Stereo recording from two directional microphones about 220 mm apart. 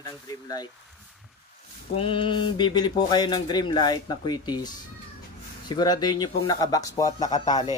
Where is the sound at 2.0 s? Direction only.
25° left (ahead or behind).